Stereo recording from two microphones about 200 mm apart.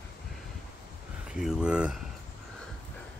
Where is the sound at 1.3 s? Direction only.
5° right (ahead or behind).